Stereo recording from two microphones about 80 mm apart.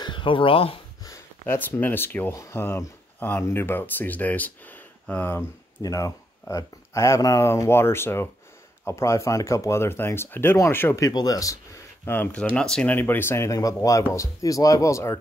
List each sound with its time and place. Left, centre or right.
0.0 s a sound: left
1.5 s speech: left
5.8 s speech: left
6.5 s speech: left
7.4 s speech: left
11.0 s speech: left
12.0 s speech: left
12.9 s speech: left
13.5 s speech: left